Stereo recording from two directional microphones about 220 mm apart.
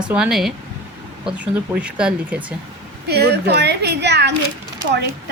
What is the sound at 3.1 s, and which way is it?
A woman's voice, 50° right (ahead or behind).